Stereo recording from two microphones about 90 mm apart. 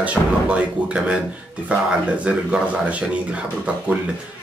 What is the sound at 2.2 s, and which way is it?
Speech, 10° right (ahead or behind).